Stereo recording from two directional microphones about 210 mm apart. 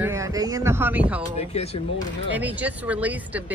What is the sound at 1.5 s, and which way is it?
Speech, 30° left (ahead or behind).